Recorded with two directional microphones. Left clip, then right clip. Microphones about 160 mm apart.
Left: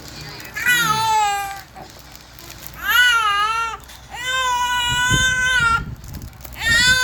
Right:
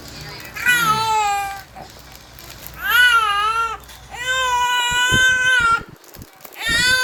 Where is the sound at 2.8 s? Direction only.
10° right (ahead or behind).